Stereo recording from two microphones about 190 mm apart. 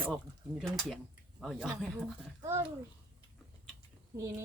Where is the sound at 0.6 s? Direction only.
Centre (ahead or behind).